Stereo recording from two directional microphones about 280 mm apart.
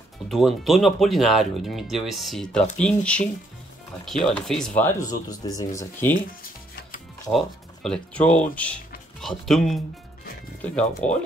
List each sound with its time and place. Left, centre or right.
0.3 s speech: centre
7.2 s speech: centre